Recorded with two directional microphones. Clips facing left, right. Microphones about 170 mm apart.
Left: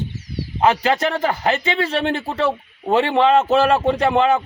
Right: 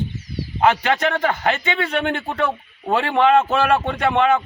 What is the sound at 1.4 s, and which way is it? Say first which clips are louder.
Speech: left 2 dB; 30° left (ahead or behind).